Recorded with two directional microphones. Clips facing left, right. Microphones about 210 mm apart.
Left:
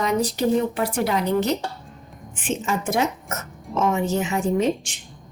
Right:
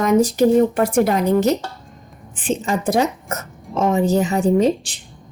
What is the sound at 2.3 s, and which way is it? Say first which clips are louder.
Speech: right 4 dB; 35° right (ahead or behind).